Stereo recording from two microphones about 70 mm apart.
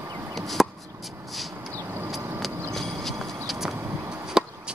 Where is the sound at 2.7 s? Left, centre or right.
Centre.